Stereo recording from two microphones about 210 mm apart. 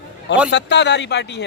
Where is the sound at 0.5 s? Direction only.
55° left (ahead or behind).